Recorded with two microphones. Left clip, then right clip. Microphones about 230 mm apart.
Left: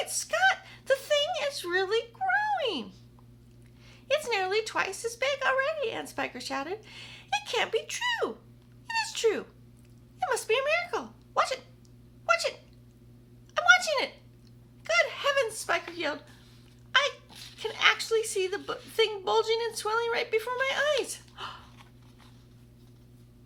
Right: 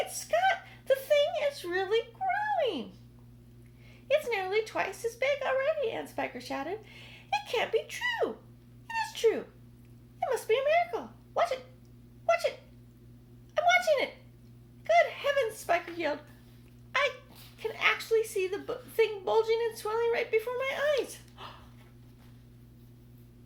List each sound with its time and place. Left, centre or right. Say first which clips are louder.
0.0 s a sound: left 2 dB; centre
4.1 s speech: left 1 dB; centre
8.9 s dog: left 1 dB; centre
10.2 s speech: left 1 dB; centre
12.2 s a sound: left 1 dB; centre
17.6 s a woman's voice: left 3 dB; centre